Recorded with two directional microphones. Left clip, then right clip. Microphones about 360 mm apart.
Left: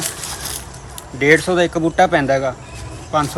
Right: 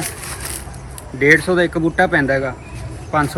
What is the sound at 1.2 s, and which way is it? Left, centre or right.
Speech, centre.